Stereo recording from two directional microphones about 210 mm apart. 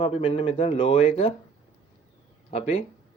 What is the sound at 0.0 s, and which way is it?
Speech, 30° left (ahead or behind).